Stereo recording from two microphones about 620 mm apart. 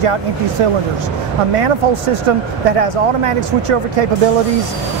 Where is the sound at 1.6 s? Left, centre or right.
Right.